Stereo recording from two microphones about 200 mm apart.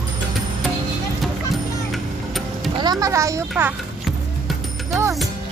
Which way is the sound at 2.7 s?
20° right (ahead or behind).